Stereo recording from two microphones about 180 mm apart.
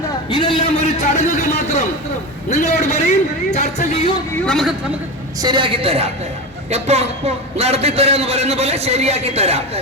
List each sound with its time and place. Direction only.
0.3 s a man's voice: 25° left (ahead or behind)
1.1 s a sound: 40° left (ahead or behind)
2.5 s speech: 40° left (ahead or behind)
4.4 s a man's voice: centre (ahead or behind)
5.4 s a woman's voice: 25° right (ahead or behind)